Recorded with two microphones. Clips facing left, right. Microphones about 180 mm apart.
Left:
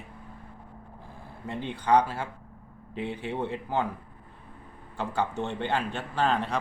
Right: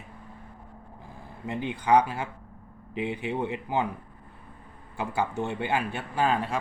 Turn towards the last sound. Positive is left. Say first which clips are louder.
# right 1 dB
turn(degrees=-5)  # may be behind; listen again after turning